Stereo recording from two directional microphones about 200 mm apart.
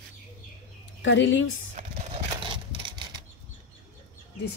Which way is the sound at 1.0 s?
65° left (ahead or behind).